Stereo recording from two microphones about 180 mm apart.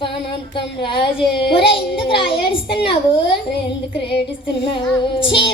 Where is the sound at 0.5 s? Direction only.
30° left (ahead or behind).